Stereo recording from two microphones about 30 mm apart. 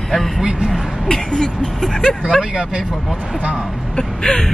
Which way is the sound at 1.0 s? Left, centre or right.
Left.